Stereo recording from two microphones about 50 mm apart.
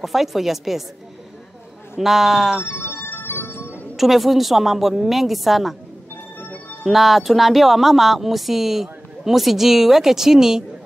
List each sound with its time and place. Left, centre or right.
0.0 s a woman's voice: centre
2.0 s speech: centre
2.6 s music: left
3.9 s a woman's voice: centre
6.4 s music: left
6.8 s a woman's voice: centre